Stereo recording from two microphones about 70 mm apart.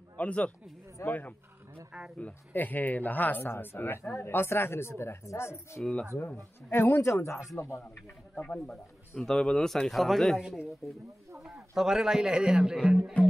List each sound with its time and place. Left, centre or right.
0.2 s speech: centre
1.9 s speech: centre
2.1 s speech: left
8.4 s a man's voice: centre